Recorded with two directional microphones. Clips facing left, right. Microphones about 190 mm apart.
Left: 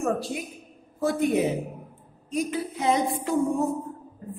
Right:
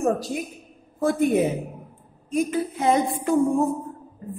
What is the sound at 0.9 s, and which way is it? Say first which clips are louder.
A woman's voice: right 3 dB; 50° right (ahead or behind).